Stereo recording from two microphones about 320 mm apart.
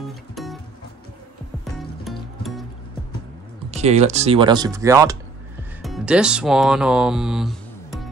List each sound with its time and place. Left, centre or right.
0.3 s music: centre
1.6 s music: centre
3.7 s speech: centre